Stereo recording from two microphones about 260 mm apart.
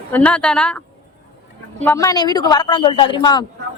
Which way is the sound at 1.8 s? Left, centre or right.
Centre.